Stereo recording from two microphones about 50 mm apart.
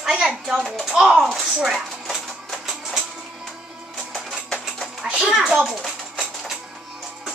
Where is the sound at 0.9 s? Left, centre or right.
Centre.